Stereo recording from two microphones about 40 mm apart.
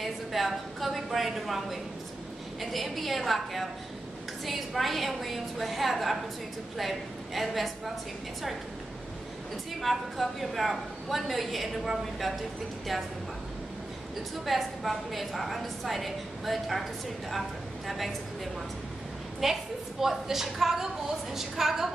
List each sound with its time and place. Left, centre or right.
0.0 s a woman's voice: centre
9.8 s a woman's voice: centre
14.4 s a woman's voice: centre